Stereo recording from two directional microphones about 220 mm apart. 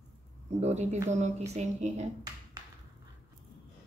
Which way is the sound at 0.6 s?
30° right (ahead or behind).